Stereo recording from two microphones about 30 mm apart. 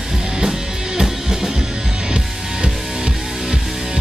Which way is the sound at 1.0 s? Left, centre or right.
Centre.